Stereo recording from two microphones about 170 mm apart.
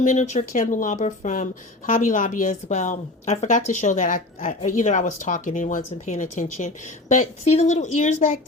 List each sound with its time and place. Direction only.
0.0 s a woman's voice: 45° left (ahead or behind)